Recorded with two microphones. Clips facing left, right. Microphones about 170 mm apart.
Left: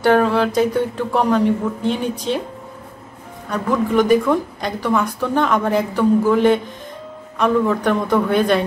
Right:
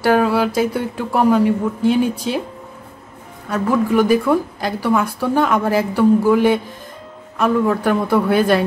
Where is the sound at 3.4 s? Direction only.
5° right (ahead or behind).